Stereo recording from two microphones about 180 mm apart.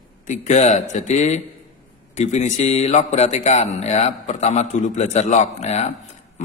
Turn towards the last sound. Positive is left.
turn(degrees=40)  # may be behind; listen again after turning